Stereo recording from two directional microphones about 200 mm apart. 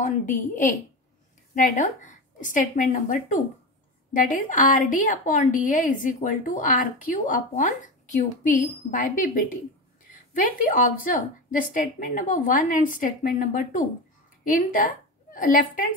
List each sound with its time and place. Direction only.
0.0 s a woman's voice: 40° left (ahead or behind)